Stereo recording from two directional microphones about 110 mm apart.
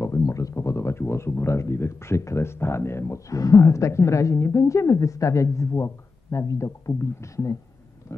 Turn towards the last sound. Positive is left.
turn(degrees=30)  # may be behind; listen again after turning